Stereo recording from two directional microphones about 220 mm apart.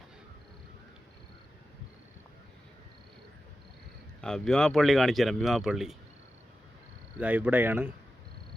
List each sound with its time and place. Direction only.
4.2 s speech: 5° left (ahead or behind)
7.2 s speech: 5° right (ahead or behind)